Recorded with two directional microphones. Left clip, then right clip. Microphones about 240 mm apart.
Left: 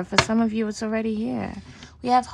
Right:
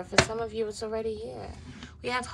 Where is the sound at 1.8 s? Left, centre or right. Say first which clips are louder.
Left 11 dB; left.